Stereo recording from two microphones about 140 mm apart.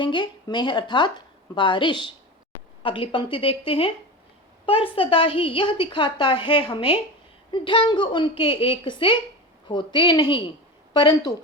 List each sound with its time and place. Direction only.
0.0 s a woman's voice: 35° left (ahead or behind)